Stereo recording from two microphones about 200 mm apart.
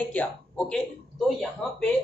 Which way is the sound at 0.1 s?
5° left (ahead or behind).